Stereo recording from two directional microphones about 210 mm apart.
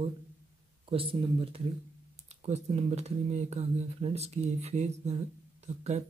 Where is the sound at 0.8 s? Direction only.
25° right (ahead or behind).